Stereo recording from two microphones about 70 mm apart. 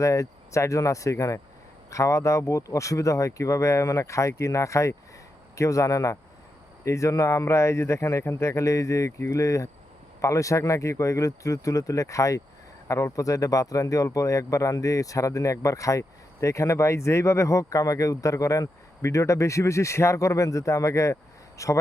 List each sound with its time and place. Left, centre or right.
0.0 s speech: left